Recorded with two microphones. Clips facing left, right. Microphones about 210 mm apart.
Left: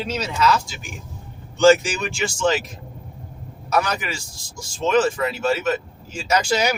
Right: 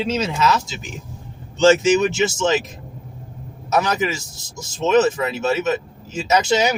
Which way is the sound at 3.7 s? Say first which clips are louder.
Right 3 dB; 20° right (ahead or behind).